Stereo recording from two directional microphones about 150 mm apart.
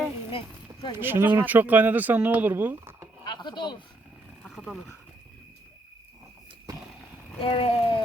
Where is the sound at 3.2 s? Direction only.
30° left (ahead or behind).